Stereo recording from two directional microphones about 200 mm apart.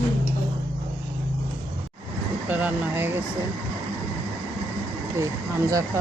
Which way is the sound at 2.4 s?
10° right (ahead or behind).